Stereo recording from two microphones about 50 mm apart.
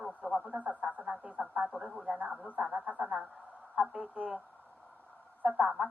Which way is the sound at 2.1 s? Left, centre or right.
Right.